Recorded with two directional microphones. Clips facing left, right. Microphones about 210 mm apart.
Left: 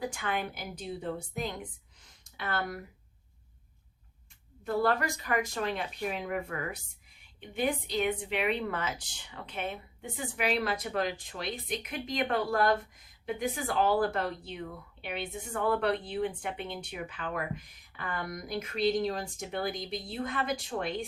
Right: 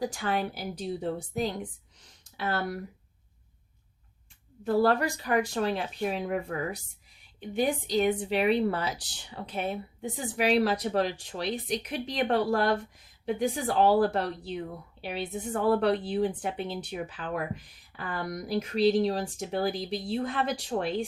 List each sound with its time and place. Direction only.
0.1 s a woman's voice: 35° right (ahead or behind)
4.6 s a woman's voice: 35° right (ahead or behind)
11.4 s speech: centre (ahead or behind)
11.9 s a woman's voice: 30° right (ahead or behind)